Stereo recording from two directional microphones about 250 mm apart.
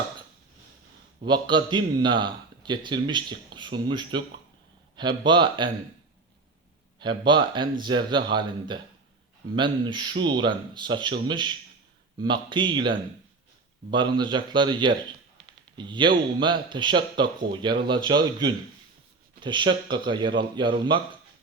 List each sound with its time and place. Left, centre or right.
1.2 s a man's voice: centre
7.0 s a man's voice: centre